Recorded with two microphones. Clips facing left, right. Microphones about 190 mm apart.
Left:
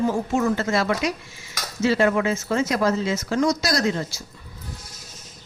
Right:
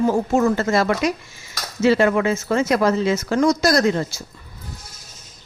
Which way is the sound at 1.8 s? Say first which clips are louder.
Right 3 dB; 65° right (ahead or behind).